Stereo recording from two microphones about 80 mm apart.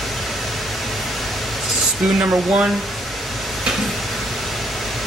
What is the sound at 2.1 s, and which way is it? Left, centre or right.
Speech, centre.